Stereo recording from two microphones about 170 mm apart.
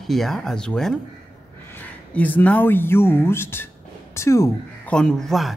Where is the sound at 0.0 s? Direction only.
Centre (ahead or behind); by 4.9 s 15° left (ahead or behind).